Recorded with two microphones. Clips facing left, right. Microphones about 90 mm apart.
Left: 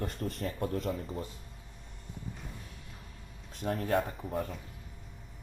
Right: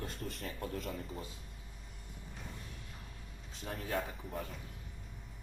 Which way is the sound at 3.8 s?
60° left (ahead or behind).